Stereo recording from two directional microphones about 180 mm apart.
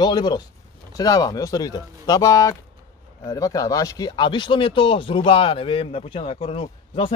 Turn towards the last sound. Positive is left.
turn(degrees=30)  # may be behind; listen again after turning